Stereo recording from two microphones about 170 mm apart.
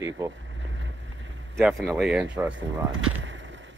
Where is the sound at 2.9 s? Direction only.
90° right.